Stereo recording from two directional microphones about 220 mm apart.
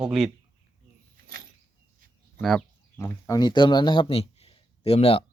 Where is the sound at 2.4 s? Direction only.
5° left (ahead or behind).